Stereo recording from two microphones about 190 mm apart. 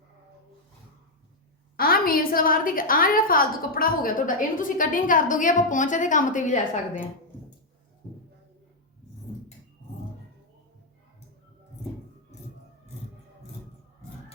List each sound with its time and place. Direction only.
1.7 s a woman's voice: 50° left (ahead or behind)